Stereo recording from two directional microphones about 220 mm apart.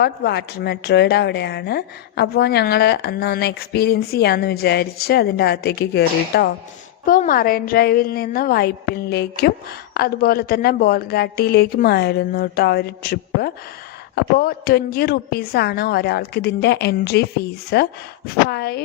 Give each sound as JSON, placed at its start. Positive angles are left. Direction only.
{"t": 0.0, "sound": "speech", "side_deg": 50}